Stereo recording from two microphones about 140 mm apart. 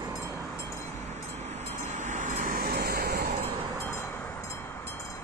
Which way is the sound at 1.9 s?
60° right (ahead or behind).